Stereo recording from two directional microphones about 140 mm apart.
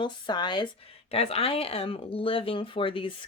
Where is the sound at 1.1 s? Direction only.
45° left (ahead or behind).